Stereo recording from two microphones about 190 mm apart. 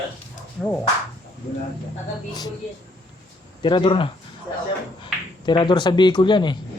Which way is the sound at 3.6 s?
25° left (ahead or behind).